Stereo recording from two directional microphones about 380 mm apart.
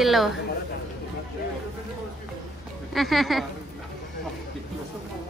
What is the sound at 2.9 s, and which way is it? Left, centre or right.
Speech, centre.